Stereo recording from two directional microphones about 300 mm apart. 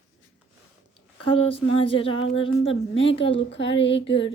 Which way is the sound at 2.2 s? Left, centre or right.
Left.